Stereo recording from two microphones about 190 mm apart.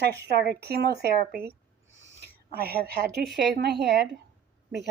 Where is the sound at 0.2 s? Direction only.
60° right (ahead or behind).